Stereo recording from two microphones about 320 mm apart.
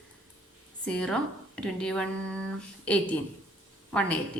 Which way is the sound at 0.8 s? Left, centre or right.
Centre.